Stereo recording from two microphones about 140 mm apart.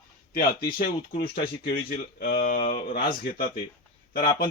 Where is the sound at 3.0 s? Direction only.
90° left.